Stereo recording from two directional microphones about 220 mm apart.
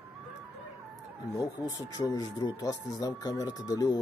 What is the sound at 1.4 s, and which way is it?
Speech, 15° left (ahead or behind).